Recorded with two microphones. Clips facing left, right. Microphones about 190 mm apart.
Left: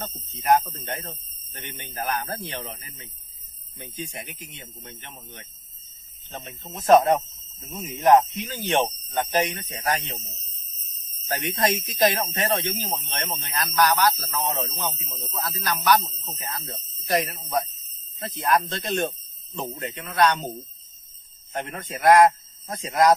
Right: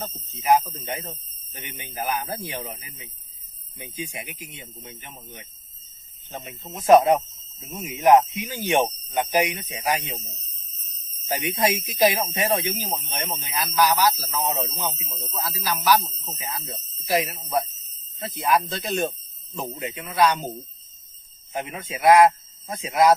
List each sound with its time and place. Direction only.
0.2 s a man's voice: centre (ahead or behind)
21.5 s a man's voice: 5° right (ahead or behind)